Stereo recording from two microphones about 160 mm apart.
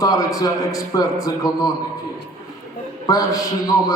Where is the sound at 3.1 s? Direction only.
20° left (ahead or behind).